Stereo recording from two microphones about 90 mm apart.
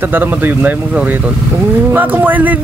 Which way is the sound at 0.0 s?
20° right (ahead or behind).